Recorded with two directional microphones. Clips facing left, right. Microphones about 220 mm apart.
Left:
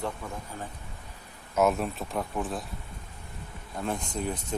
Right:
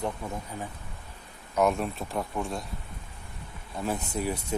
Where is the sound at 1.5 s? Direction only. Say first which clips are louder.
Even; 5° left (ahead or behind).